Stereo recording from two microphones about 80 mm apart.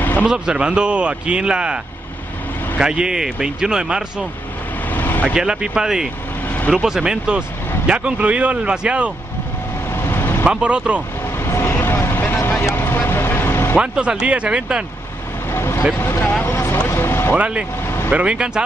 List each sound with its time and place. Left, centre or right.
0.2 s speech: centre
2.8 s speech: centre
4.9 s vehicle: left
5.3 s speech: centre
9.9 s vehicle: left
10.4 s speech: centre
11.4 s vehicle: left
13.7 s speech: centre
15.5 s vehicle: left
16.0 s speech: left
16.4 s vehicle: left
16.9 s music: left
17.8 s vehicle: left
18.1 s speech: centre